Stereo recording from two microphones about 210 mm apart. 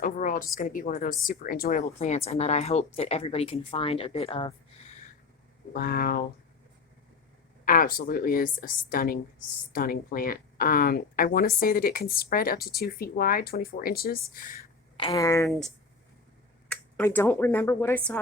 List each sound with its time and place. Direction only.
0.0 s a woman's voice: 40° left (ahead or behind); by 4.5 s 25° left (ahead or behind)
5.7 s speech: 45° left (ahead or behind)
7.6 s speech: 40° left (ahead or behind)
14.9 s speech: 20° left (ahead or behind)
16.6 s speech: 10° left (ahead or behind)